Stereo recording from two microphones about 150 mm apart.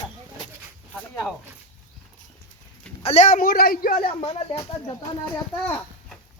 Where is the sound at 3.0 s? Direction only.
50° left (ahead or behind); by 4.1 s 75° left (ahead or behind).